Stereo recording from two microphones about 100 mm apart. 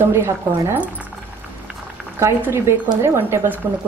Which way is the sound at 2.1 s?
25° right (ahead or behind).